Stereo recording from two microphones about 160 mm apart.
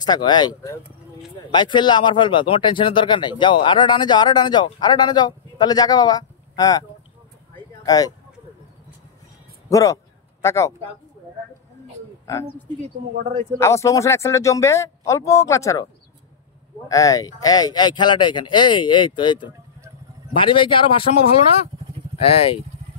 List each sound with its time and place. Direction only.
0.0 s speech: 25° left (ahead or behind)
9.7 s speech: 20° left (ahead or behind)
13.6 s speech: 20° left (ahead or behind)
16.9 s speech: 20° left (ahead or behind); by 22.6 s 35° left (ahead or behind)